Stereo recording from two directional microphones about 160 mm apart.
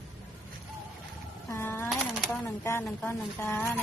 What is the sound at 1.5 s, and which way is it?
Speech, 15° left (ahead or behind).